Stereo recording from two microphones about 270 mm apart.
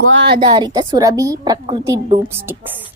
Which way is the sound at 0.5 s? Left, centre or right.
Centre.